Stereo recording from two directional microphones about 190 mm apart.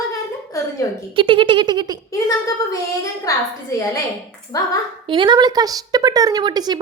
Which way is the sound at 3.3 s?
15° left (ahead or behind).